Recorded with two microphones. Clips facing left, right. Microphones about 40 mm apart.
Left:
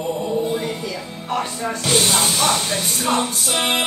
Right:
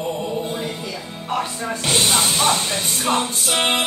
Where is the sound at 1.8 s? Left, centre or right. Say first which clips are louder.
Even; right.